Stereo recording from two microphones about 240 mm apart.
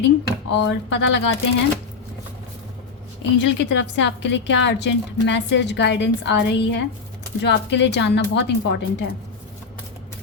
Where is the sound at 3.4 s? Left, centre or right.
Left.